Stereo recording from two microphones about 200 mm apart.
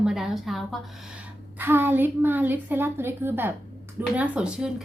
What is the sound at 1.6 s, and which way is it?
A woman's voice, 10° right (ahead or behind).